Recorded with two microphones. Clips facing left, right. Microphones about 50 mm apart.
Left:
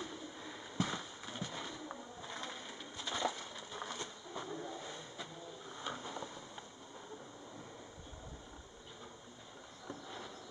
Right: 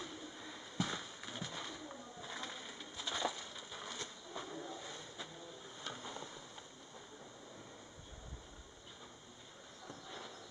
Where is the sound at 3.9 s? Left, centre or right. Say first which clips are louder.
Left 2 dB; centre.